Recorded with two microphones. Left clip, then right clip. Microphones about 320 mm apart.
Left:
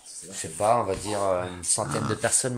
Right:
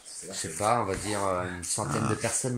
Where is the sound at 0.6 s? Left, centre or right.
Left.